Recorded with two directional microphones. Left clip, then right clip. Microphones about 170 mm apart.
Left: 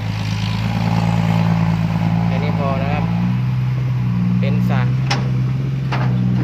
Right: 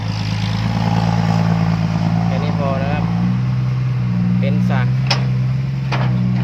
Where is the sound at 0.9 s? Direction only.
25° left (ahead or behind).